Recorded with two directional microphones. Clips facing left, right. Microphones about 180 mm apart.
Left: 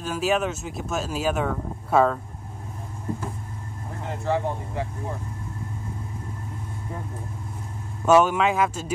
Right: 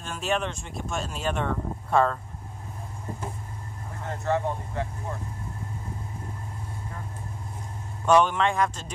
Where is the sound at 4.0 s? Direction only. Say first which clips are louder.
Left 1 dB; 15° left (ahead or behind).